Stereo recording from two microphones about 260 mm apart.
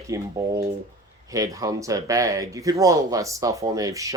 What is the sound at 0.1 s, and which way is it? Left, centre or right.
Speech, centre.